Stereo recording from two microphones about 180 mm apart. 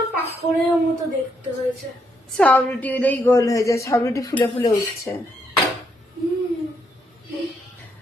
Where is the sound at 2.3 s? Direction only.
5° left (ahead or behind).